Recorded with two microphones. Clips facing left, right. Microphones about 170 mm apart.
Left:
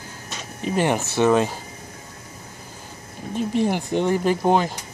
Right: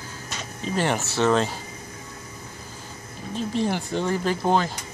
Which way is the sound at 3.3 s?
15° left (ahead or behind).